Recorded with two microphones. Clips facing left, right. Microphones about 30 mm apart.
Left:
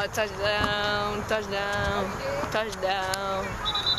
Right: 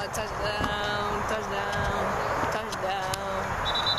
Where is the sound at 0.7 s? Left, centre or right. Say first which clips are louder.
Left 2 dB; left.